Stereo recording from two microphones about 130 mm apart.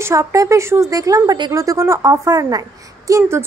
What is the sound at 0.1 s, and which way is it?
Speech, 25° right (ahead or behind).